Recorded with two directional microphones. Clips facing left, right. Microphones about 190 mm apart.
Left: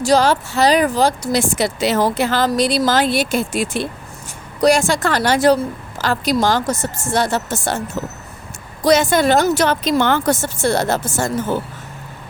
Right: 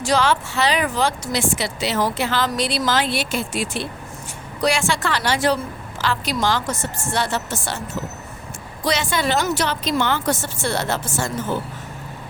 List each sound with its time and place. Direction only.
0.0 s a woman's voice: 40° left (ahead or behind)
8.8 s a woman's voice: 45° left (ahead or behind)